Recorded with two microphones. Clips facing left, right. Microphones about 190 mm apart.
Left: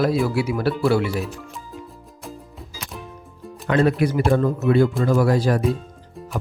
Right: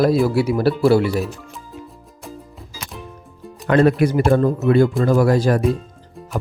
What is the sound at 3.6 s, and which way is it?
Speech, 50° right (ahead or behind).